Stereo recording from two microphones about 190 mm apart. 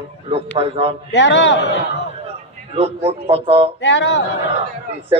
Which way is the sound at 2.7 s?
35° right (ahead or behind).